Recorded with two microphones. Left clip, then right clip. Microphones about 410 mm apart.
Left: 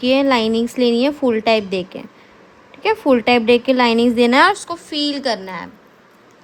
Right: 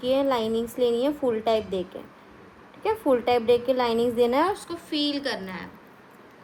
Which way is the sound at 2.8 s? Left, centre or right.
Left.